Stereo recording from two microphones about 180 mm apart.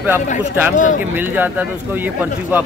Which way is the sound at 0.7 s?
45° left (ahead or behind).